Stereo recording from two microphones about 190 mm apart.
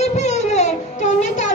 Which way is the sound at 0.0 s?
35° left (ahead or behind).